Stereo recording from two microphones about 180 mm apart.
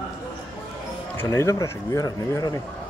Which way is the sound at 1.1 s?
15° left (ahead or behind).